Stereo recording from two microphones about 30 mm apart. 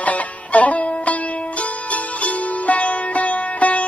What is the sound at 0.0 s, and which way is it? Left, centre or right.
Music, left.